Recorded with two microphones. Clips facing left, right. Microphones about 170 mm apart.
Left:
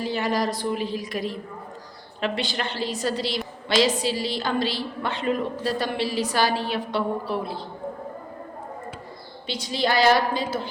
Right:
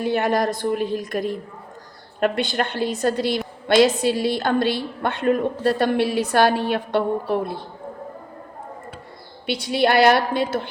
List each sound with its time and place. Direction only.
0.0 s a woman's voice: 55° right (ahead or behind)
9.5 s a woman's voice: 60° right (ahead or behind)